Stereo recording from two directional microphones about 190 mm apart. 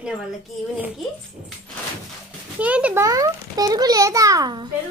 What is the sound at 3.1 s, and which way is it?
A child's voice, 20° right (ahead or behind).